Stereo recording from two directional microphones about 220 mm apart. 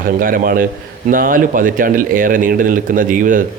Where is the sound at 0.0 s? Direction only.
40° right (ahead or behind).